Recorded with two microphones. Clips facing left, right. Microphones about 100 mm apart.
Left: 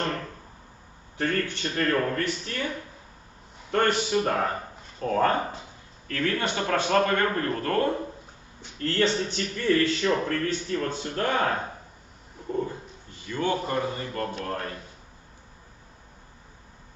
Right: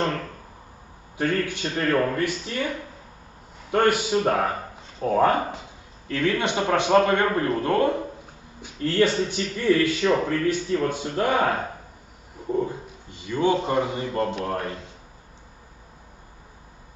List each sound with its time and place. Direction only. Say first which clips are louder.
1.1 s speech: right 3 dB; 15° right (ahead or behind)
3.7 s a man's voice: right 3 dB; 10° right (ahead or behind)